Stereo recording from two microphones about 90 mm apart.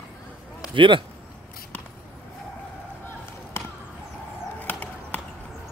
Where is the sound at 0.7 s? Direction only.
65° right (ahead or behind).